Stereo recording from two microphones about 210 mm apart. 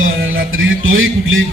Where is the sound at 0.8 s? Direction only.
70° right (ahead or behind).